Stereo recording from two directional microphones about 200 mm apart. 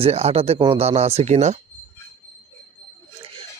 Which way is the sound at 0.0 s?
30° right (ahead or behind).